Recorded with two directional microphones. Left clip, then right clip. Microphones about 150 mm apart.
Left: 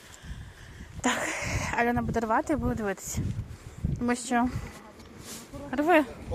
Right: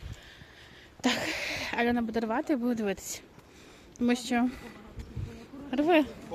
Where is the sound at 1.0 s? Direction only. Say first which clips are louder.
Left 1 dB; 15° right (ahead or behind).